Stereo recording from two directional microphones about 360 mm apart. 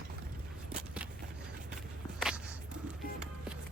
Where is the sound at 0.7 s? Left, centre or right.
Centre.